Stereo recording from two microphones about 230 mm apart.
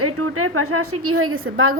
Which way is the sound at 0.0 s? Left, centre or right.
Right.